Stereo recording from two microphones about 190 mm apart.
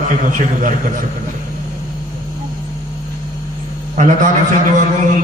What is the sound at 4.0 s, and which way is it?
A man's voice, 45° right (ahead or behind).